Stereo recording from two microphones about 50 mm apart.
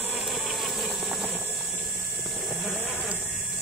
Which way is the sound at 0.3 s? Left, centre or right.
Centre.